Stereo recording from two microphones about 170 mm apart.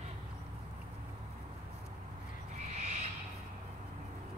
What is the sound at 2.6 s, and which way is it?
Owl, 40° right (ahead or behind).